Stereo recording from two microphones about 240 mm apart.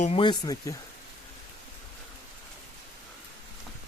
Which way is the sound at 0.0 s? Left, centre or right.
Left.